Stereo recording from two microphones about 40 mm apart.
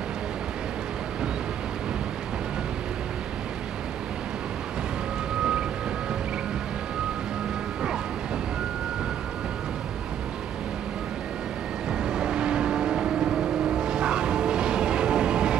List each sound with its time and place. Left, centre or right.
5.4 s vehicle: right
11.9 s vehicle: centre